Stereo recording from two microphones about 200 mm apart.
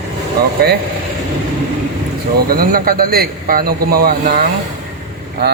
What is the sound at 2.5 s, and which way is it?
A man's voice, 45° right (ahead or behind).